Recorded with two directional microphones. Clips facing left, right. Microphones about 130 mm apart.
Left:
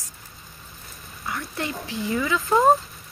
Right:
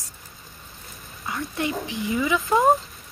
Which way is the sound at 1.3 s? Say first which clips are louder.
Right 3 dB; 20° right (ahead or behind).